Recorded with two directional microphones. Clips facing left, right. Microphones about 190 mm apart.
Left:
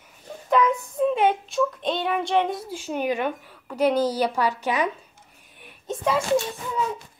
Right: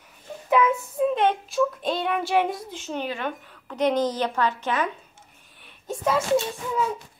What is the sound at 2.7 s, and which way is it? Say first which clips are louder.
A woman's voice: left 5 dB; 10° left (ahead or behind).